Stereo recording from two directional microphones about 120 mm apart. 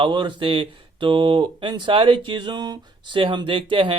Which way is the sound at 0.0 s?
40° right (ahead or behind).